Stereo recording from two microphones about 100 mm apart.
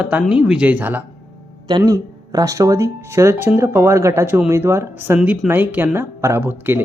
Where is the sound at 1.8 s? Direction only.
35° right (ahead or behind).